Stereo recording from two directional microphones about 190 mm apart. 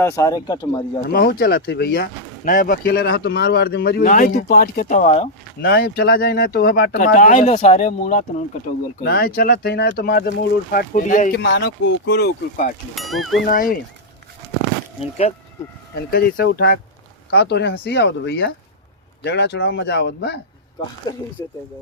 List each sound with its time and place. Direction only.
0.0 s speech: 15° left (ahead or behind)
1.0 s speech: 55° left (ahead or behind); by 5.3 s 35° left (ahead or behind)
5.6 s speech: 55° left (ahead or behind)
7.0 s speech: 40° left (ahead or behind)
9.0 s speech: 55° left (ahead or behind)
10.7 s speech: 45° left (ahead or behind)
11.4 s speech: 70° left (ahead or behind)
13.0 s speech: centre (ahead or behind)
13.4 s speech: 50° left (ahead or behind)
16.0 s speech: 60° left (ahead or behind)
21.1 s speech: 20° left (ahead or behind)